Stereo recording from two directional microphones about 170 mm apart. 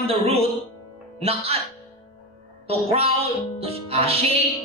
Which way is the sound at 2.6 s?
35° right (ahead or behind).